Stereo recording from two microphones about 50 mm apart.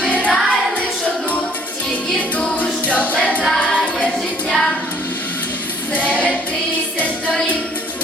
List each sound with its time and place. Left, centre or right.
0.0 s music: left
2.6 s music: left
3.6 s choir: left
5.9 s choir: left